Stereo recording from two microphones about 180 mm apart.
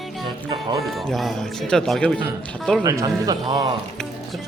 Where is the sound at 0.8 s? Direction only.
Centre (ahead or behind).